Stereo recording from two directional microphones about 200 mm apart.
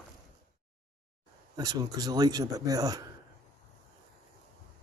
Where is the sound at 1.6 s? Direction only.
20° right (ahead or behind).